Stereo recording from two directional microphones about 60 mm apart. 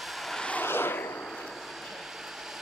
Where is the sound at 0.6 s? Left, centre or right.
Left.